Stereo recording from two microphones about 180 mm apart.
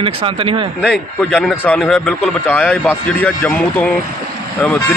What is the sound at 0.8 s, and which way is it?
A man's voice, 5° left (ahead or behind).